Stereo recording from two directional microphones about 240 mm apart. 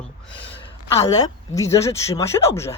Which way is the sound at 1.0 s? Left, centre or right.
Centre.